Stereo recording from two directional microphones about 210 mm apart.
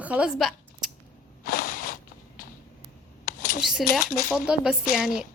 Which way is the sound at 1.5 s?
45° left (ahead or behind).